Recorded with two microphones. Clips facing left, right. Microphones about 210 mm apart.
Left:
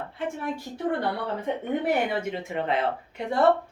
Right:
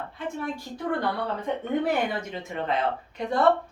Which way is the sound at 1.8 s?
25° left (ahead or behind).